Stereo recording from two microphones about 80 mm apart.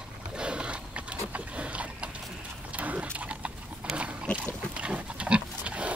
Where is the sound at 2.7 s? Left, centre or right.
Centre.